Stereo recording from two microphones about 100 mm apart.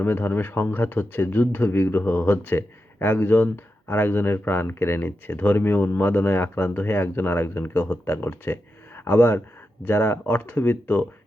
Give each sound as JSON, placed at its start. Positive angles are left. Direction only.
{"t": 0.0, "sound": "speech", "side_deg": 20}